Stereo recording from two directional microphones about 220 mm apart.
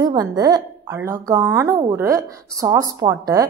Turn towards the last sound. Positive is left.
turn(degrees=-15)  # may be behind; listen again after turning